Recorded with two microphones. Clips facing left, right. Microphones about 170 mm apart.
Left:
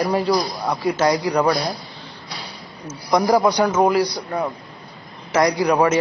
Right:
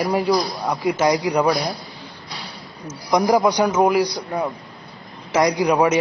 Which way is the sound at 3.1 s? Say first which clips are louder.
Even; 15° right (ahead or behind).